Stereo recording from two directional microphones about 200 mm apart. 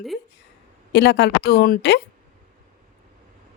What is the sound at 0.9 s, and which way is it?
Speech, 55° left (ahead or behind).